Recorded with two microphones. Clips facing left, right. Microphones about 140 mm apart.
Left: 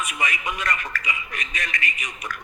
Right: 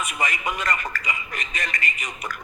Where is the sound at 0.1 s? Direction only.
Centre (ahead or behind).